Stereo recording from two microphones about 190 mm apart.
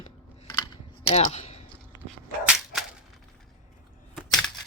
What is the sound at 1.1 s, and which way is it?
Speech, 35° left (ahead or behind).